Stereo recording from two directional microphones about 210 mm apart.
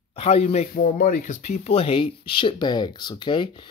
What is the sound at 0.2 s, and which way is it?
Speech, 30° left (ahead or behind).